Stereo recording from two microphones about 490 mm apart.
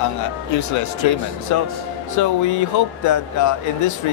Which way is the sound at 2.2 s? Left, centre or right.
Left.